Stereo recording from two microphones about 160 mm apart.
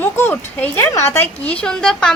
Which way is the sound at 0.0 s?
10° left (ahead or behind).